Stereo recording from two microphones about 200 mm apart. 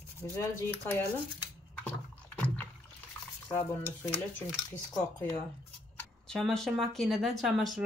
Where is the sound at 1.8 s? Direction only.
5° left (ahead or behind).